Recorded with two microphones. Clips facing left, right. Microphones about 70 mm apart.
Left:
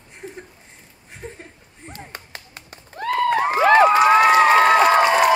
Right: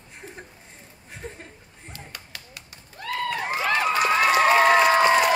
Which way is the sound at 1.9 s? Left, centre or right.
Left.